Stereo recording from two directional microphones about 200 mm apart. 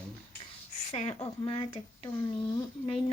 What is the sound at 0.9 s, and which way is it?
A child's voice, 30° left (ahead or behind).